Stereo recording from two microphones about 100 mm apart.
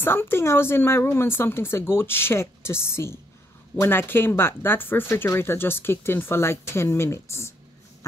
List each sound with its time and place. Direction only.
0.0 s speech: 25° left (ahead or behind)